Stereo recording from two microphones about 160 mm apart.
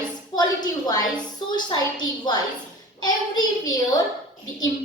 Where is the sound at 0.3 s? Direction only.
25° left (ahead or behind).